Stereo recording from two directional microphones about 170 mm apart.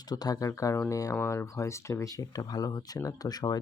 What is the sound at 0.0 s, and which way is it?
Speech, 25° left (ahead or behind).